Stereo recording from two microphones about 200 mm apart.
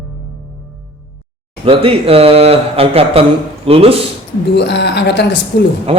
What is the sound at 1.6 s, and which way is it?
A man's voice, 30° right (ahead or behind).